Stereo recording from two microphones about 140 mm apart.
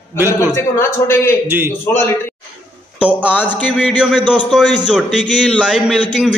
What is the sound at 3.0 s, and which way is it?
Speech, 10° right (ahead or behind).